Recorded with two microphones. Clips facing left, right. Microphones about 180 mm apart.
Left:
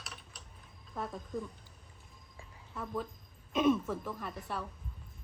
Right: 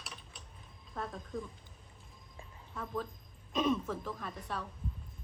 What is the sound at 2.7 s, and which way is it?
A woman's voice, 5° left (ahead or behind).